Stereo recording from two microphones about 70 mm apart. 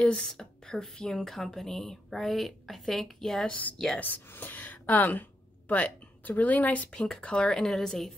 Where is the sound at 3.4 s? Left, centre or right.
Centre.